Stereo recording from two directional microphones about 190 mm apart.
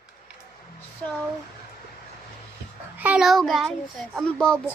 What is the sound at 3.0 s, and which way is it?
A child's voice, 5° right (ahead or behind).